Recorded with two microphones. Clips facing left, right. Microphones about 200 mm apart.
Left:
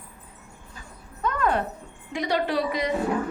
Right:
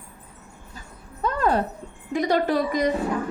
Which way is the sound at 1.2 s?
35° right (ahead or behind).